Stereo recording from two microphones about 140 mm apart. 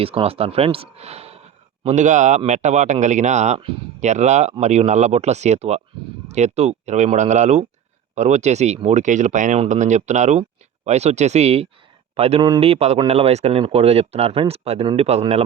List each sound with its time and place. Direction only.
0.0 s speech: 45° right (ahead or behind)